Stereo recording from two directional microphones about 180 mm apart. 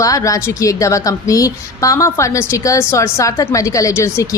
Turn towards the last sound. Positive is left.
turn(degrees=15)  # may be behind; listen again after turning